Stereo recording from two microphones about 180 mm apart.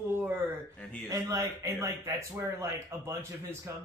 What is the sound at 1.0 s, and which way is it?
A man's voice, 20° right (ahead or behind).